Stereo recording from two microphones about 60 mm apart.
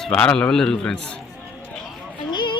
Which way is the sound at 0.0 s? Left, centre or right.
Centre.